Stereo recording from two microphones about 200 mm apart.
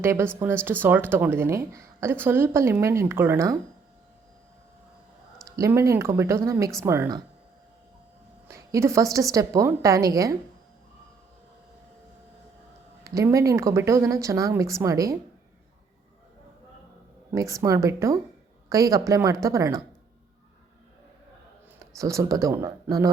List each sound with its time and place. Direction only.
0.0 s speech: 15° right (ahead or behind)
5.5 s speech: 15° right (ahead or behind)
8.4 s speech: 15° right (ahead or behind)
13.1 s speech: 15° right (ahead or behind)
17.3 s speech: 15° right (ahead or behind)
21.9 s speech: 15° right (ahead or behind)